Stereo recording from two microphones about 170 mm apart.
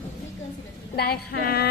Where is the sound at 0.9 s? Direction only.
70° left (ahead or behind).